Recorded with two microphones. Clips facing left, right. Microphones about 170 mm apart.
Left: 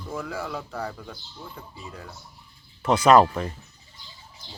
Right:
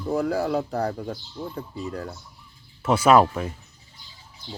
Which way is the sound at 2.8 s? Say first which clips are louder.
Even; 10° right (ahead or behind).